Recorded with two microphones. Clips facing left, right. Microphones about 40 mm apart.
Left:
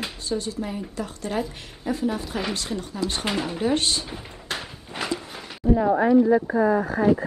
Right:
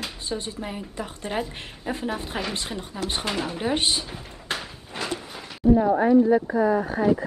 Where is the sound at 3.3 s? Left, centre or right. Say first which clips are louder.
Left 1 dB; centre.